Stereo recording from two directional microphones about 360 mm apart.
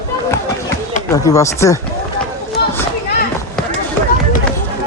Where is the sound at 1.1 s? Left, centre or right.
Centre.